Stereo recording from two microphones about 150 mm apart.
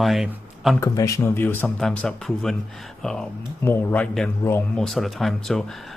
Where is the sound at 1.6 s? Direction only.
5° left (ahead or behind).